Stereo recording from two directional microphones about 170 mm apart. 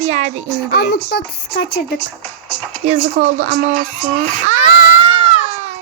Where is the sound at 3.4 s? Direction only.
45° right (ahead or behind).